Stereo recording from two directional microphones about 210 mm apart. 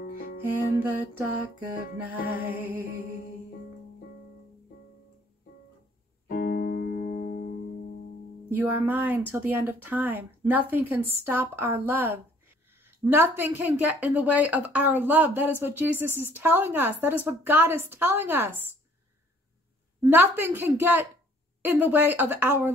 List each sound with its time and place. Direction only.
0.0 s music: 45° left (ahead or behind)
2.2 s a woman's voice: 10° right (ahead or behind)
6.2 s music: 45° left (ahead or behind)
8.5 s a woman's voice: 10° right (ahead or behind)
20.0 s a woman's voice: 10° right (ahead or behind)